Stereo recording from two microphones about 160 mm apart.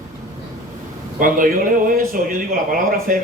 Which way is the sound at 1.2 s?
60° right (ahead or behind).